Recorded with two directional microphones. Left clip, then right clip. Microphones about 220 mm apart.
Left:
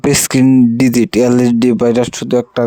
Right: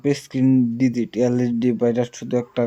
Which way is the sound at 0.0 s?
50° left (ahead or behind).